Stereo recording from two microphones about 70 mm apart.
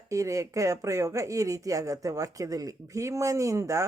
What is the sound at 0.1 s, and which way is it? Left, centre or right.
A woman's voice, right.